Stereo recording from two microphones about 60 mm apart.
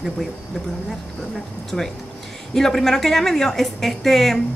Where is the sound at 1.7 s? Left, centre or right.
Centre.